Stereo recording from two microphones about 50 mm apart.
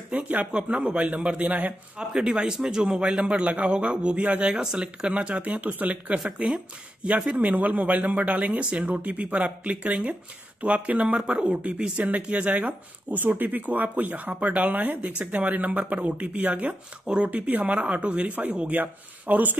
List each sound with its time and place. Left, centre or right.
0.1 s speech: right
0.5 s speech: right
2.0 s speech: centre
4.5 s speech: centre
5.1 s speech: right
6.1 s speech: centre
13.2 s speech: right
15.0 s speech: right